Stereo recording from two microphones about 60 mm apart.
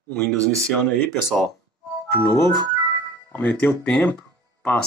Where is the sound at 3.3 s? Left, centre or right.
Left.